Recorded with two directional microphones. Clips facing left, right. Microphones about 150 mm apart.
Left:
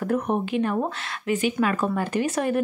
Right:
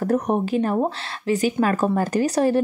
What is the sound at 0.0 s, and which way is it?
Speech, 40° right (ahead or behind).